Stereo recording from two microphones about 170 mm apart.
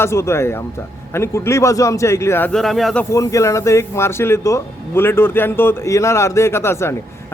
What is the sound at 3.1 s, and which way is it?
Speech, 20° left (ahead or behind).